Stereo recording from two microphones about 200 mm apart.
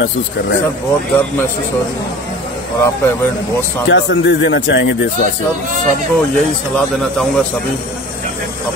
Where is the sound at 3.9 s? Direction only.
70° left (ahead or behind).